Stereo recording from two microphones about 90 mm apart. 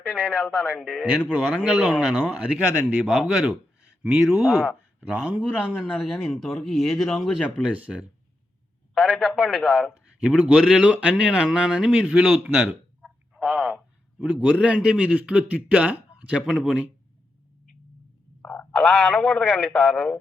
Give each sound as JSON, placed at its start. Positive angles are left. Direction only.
{"t": 0.2, "sound": "speech", "side_deg": -5}
{"t": 0.4, "sound": "speech", "side_deg": 10}
{"t": 1.4, "sound": "a man's voice", "side_deg": -10}
{"t": 4.0, "sound": "a man's voice", "side_deg": -10}
{"t": 9.0, "sound": "speech", "side_deg": 0}
{"t": 10.2, "sound": "a man's voice", "side_deg": -10}
{"t": 13.0, "sound": "a sound", "side_deg": -5}
{"t": 14.6, "sound": "a man's voice", "side_deg": -10}
{"t": 18.4, "sound": "a sound", "side_deg": 15}
{"t": 18.8, "sound": "speech", "side_deg": 0}